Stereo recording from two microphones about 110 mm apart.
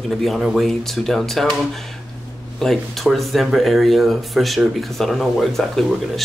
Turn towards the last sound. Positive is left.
turn(degrees=0)  # may be behind; listen again after turning